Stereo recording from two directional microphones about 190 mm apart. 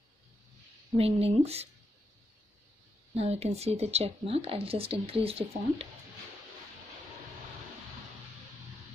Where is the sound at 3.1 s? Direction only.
35° right (ahead or behind).